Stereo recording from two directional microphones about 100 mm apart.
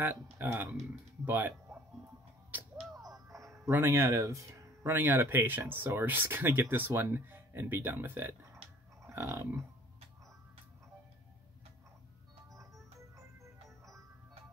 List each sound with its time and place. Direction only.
0.0 s speech: 20° right (ahead or behind)
2.5 s music: 20° right (ahead or behind)
3.0 s music: 35° right (ahead or behind)
3.7 s speech: 25° right (ahead or behind)
9.0 s dog: 30° right (ahead or behind)